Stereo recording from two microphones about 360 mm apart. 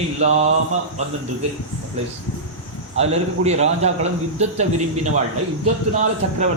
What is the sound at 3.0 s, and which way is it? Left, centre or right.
A man's voice, centre.